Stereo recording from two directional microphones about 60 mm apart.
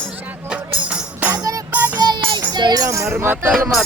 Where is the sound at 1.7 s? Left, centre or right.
Right.